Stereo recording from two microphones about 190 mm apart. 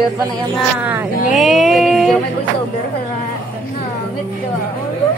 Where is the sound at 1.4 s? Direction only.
Centre (ahead or behind).